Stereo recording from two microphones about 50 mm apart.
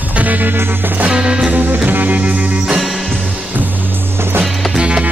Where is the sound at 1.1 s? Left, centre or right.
Centre.